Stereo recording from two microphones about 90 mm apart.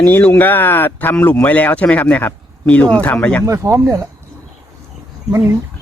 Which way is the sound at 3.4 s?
35° right (ahead or behind).